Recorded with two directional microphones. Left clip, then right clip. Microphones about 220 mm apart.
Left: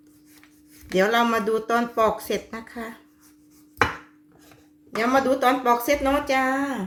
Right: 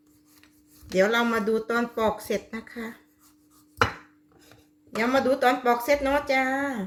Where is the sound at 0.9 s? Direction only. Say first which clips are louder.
Left 2 dB; 15° left (ahead or behind).